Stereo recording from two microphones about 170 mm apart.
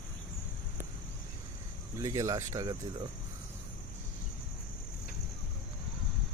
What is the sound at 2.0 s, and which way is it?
Speech, 20° right (ahead or behind).